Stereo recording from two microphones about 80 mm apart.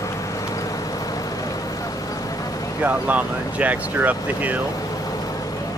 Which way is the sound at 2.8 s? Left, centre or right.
Centre.